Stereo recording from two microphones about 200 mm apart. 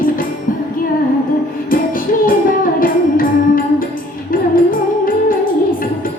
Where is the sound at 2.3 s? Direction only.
45° left (ahead or behind).